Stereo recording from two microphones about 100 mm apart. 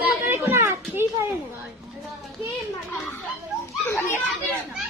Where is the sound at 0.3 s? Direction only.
25° right (ahead or behind).